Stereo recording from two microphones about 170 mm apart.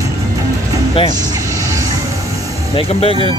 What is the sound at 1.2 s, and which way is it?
Vehicle, 20° right (ahead or behind).